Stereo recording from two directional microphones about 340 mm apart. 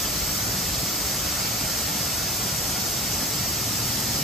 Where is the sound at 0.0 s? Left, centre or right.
Centre.